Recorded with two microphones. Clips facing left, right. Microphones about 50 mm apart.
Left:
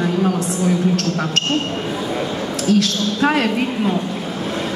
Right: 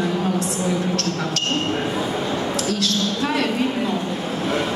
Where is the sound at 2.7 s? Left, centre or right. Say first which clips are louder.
Left 5 dB; left.